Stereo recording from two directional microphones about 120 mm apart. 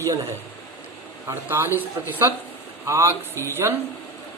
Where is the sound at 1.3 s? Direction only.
20° right (ahead or behind).